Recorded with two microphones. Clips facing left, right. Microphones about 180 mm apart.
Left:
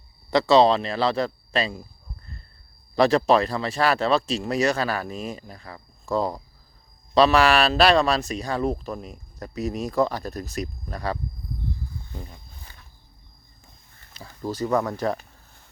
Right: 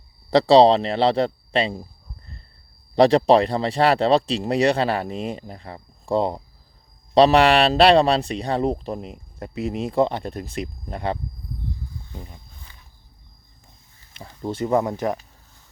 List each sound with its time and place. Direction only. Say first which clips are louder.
0.3 s speech: right 4 dB; 35° right (ahead or behind)
2.9 s speech: right 4 dB; 30° right (ahead or behind)
14.2 s speech: right 2 dB; 25° right (ahead or behind)